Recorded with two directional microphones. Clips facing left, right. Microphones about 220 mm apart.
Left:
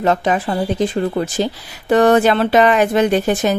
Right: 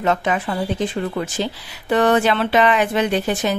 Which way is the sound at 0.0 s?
35° left (ahead or behind).